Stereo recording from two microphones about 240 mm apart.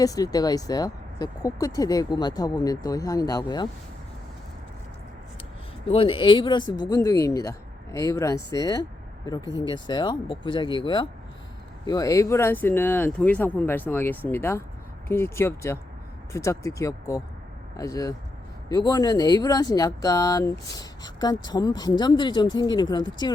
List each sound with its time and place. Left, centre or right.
0.0 s speech: centre
5.9 s speech: left